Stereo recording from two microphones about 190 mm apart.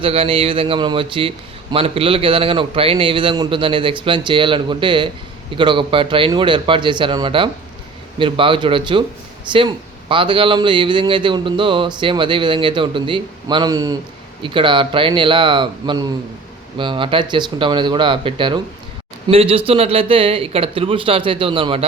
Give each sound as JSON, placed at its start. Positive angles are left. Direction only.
{"t": 0.0, "sound": "a man's voice", "side_deg": -30}